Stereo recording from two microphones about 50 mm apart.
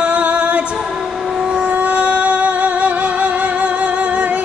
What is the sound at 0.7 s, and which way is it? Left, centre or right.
Music, centre.